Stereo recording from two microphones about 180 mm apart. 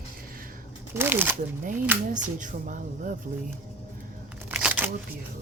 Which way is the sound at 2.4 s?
45° right (ahead or behind).